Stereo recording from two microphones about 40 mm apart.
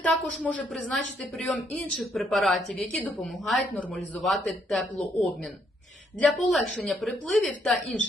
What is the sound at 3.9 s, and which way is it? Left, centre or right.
Speech, centre.